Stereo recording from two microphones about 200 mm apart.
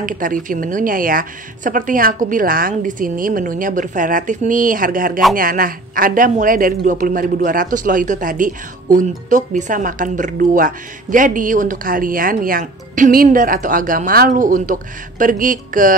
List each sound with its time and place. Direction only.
0.0 s a woman's voice: 40° right (ahead or behind)